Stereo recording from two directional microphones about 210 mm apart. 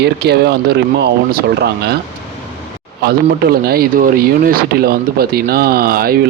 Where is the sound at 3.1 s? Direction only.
45° right (ahead or behind).